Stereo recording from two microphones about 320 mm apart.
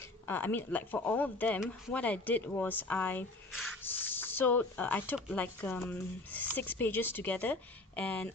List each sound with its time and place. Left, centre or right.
0.3 s speech: centre